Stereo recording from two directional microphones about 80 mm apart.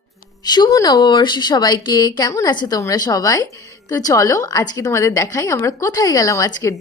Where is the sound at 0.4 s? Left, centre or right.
Left.